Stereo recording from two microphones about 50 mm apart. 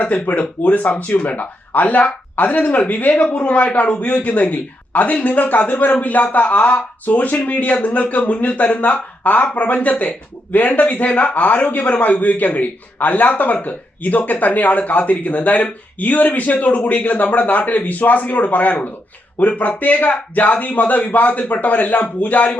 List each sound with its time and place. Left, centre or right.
0.0 s a man's voice: left